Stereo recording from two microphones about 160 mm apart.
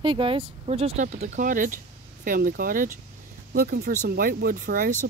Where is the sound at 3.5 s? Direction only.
70° right (ahead or behind).